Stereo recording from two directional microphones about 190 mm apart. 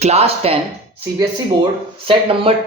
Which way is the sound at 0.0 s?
35° right (ahead or behind).